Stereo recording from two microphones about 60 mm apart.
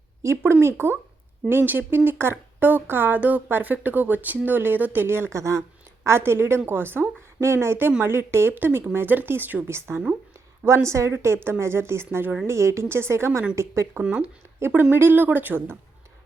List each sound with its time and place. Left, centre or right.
0.2 s a woman's voice: right
0.5 s speech: right
5.0 s speech: right
6.1 s a woman's voice: right
9.6 s a woman's voice: right
14.0 s speech: centre
14.6 s speech: right